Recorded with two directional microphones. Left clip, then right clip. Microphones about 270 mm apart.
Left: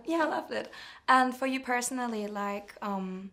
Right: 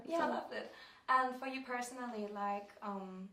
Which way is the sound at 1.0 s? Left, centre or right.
Left.